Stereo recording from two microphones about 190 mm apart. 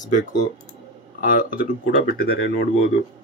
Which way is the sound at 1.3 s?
45° left (ahead or behind).